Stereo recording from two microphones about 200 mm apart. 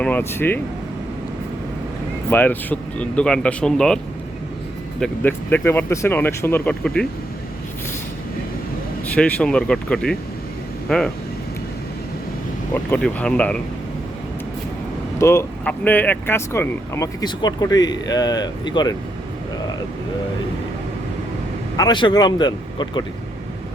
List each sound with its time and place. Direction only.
0.0 s speech: 10° left (ahead or behind)
2.3 s speech: 10° left (ahead or behind)
9.1 s speech: 5° left (ahead or behind)
12.7 s speech: 10° left (ahead or behind)
15.2 s speech: 15° left (ahead or behind)
21.8 s speech: 20° left (ahead or behind)